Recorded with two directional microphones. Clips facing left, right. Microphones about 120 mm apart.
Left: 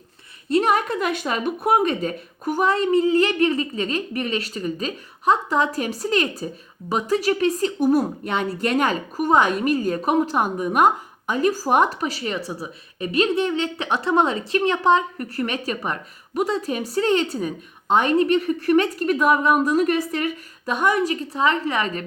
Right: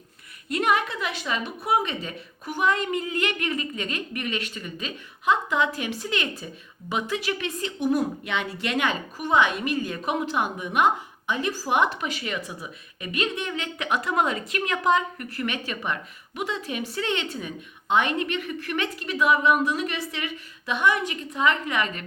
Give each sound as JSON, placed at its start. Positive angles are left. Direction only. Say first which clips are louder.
{"t": 0.4, "sound": "speech", "louder": "left 5 dB", "side_deg": 35}